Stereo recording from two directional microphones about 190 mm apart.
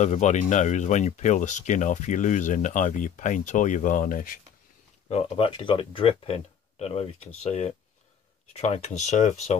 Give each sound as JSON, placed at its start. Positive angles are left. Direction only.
{"t": 0.0, "sound": "speech", "side_deg": 40}
{"t": 5.0, "sound": "speech", "side_deg": 30}